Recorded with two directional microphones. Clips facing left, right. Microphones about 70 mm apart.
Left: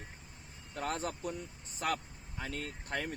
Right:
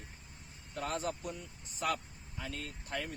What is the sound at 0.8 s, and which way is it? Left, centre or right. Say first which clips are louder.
Speech: even; left.